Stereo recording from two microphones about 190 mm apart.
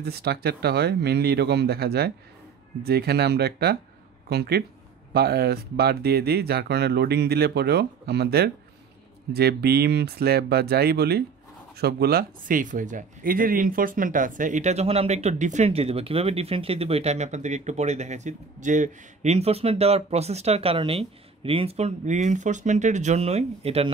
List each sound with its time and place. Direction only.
0.0 s speech: 55° right (ahead or behind); by 23.9 s 30° right (ahead or behind)